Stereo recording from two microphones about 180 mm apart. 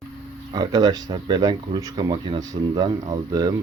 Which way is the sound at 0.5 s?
20° right (ahead or behind).